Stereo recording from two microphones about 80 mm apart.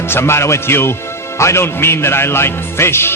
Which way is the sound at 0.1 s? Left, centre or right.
Left.